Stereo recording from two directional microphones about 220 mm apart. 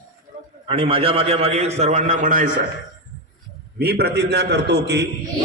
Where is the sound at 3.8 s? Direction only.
45° right (ahead or behind).